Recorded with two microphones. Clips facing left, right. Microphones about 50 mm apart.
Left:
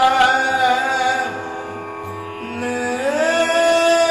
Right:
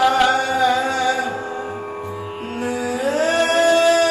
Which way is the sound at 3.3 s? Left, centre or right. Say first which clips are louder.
Even; left.